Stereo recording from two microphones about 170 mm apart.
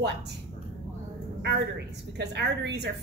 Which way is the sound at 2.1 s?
80° right.